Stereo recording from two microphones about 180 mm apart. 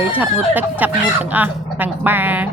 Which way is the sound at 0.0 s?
10° right (ahead or behind).